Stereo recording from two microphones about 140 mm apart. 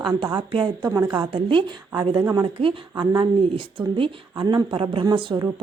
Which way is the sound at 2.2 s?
25° right (ahead or behind).